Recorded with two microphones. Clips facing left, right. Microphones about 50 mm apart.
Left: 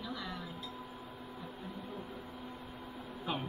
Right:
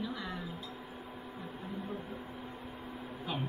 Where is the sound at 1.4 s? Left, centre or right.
Centre.